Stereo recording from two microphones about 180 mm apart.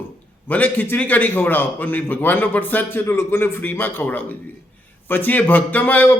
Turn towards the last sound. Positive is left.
turn(degrees=10)  # may be behind; listen again after turning